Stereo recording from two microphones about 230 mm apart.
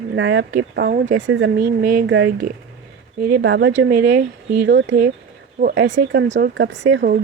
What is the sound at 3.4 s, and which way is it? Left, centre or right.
Speech, right.